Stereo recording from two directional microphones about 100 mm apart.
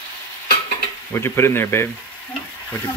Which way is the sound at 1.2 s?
25° left (ahead or behind).